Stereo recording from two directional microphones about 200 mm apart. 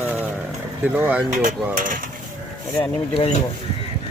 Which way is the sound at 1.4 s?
40° right (ahead or behind).